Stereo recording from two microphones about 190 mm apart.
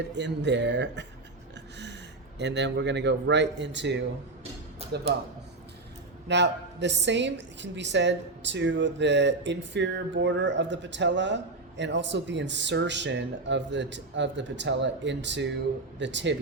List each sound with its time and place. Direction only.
0.1 s a woman's voice: 70° right (ahead or behind)
2.4 s a woman's voice: 65° right (ahead or behind)
4.8 s music: 30° right (ahead or behind)
6.2 s a woman's voice: 65° right (ahead or behind)